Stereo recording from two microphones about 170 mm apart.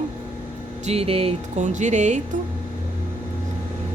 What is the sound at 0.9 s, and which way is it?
A woman's voice, 35° right (ahead or behind).